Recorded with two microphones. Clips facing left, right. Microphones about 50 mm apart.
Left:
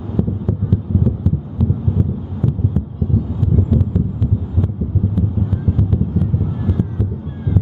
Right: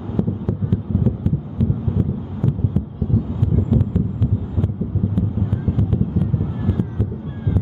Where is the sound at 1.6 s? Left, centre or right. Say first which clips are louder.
Left 2 dB; centre.